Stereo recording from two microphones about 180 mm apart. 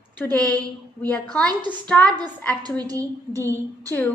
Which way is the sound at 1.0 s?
5° left (ahead or behind).